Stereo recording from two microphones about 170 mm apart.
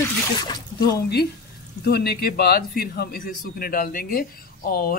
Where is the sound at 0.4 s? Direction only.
25° left (ahead or behind).